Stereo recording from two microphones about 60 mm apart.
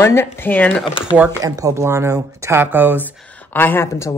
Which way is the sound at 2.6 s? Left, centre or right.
Right.